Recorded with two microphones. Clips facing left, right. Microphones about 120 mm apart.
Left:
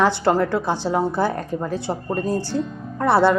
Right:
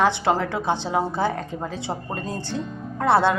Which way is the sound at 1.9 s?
15° right (ahead or behind).